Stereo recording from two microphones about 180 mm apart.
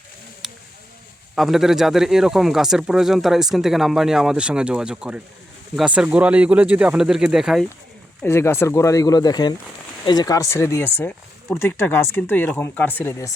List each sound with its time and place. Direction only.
1.4 s speech: centre (ahead or behind)
8.2 s speech: 15° left (ahead or behind)